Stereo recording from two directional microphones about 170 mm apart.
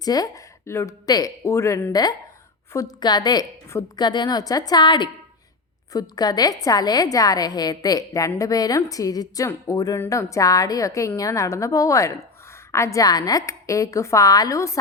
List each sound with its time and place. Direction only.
0.0 s a woman's voice: 20° left (ahead or behind)